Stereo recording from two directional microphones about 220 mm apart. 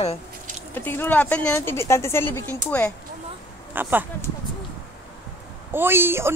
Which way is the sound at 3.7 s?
10° right (ahead or behind).